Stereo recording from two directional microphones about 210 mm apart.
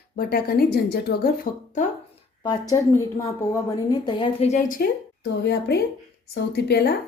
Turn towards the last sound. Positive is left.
turn(degrees=50)  # may be behind; listen again after turning